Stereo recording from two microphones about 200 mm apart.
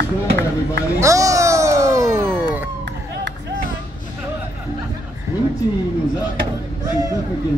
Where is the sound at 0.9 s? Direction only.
15° right (ahead or behind).